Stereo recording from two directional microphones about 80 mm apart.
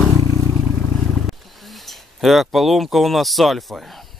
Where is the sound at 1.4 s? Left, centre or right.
Centre.